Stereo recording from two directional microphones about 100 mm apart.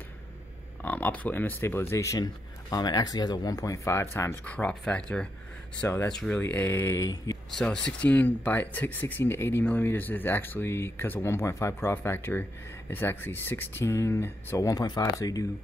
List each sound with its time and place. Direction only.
0.8 s speech: 15° left (ahead or behind)
7.5 s speech: 10° left (ahead or behind); by 14.7 s 25° left (ahead or behind)
14.7 s speech: 40° left (ahead or behind)